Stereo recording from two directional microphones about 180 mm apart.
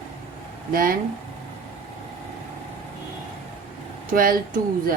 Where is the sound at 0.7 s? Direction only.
50° right (ahead or behind).